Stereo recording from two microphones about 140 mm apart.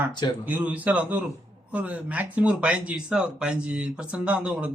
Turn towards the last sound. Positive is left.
turn(degrees=-10)  # may be behind; listen again after turning